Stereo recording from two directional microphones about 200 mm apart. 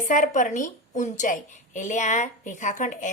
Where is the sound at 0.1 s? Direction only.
40° left (ahead or behind).